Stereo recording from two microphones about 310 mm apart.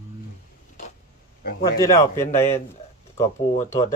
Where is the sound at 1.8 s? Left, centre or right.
Centre.